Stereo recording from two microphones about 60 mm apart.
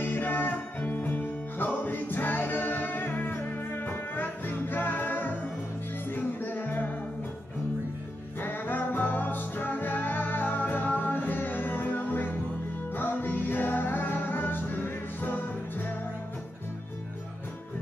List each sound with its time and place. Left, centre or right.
0.0 s music: left
8.4 s music: left